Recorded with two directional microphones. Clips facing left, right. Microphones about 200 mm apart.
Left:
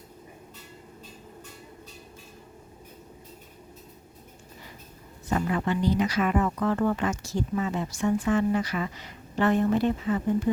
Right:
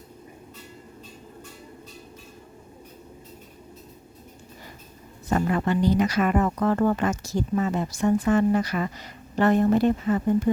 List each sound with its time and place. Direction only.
5.3 s speech: 45° right (ahead or behind)